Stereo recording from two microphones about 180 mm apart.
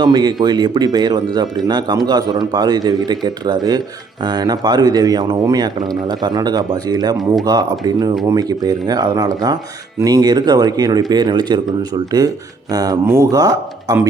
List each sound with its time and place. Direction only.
0.0 s speech: 25° right (ahead or behind)